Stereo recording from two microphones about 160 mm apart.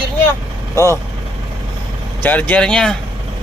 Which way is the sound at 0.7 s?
20° left (ahead or behind).